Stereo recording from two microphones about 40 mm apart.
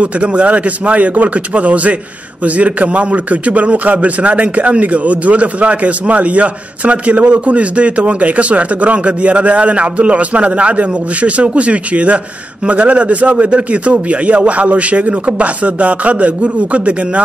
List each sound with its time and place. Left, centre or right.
0.0 s a man's voice: right